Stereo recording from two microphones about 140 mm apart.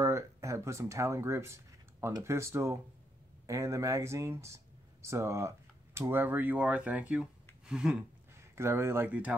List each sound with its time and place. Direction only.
0.0 s speech: 20° right (ahead or behind)
7.6 s a sound: 5° right (ahead or behind)
8.4 s speech: 20° right (ahead or behind)